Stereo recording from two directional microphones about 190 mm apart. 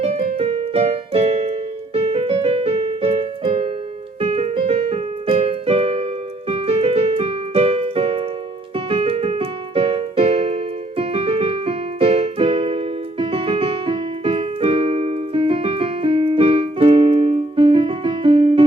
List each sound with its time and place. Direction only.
0.3 s keyboard: 30° right (ahead or behind)